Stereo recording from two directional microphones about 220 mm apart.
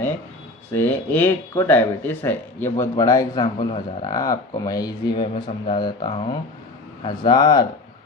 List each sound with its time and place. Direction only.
0.7 s speech: 10° left (ahead or behind)